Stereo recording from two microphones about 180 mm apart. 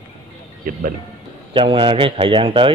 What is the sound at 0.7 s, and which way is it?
Speech, 50° right (ahead or behind).